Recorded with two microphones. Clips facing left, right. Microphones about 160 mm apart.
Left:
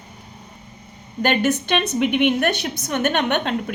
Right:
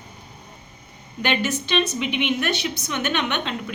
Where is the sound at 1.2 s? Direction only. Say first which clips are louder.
Left 5 dB; 50° left (ahead or behind).